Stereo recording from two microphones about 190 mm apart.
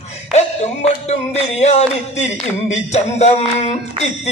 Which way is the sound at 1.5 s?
35° left (ahead or behind).